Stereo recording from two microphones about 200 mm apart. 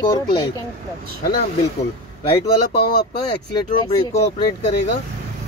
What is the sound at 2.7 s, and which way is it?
Speech, 50° left (ahead or behind).